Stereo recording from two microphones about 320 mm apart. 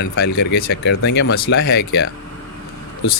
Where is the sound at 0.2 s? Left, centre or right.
Left.